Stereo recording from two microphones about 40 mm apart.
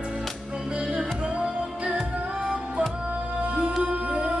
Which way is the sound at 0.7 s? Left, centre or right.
Right.